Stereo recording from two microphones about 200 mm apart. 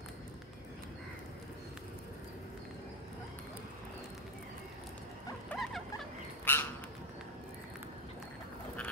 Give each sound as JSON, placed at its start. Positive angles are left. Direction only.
{"t": 5.5, "sound": "rodents", "side_deg": 10}
{"t": 6.4, "sound": "bird", "side_deg": 10}